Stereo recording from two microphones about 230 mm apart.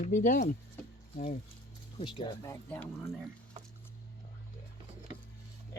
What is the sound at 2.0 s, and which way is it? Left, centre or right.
Speech, centre.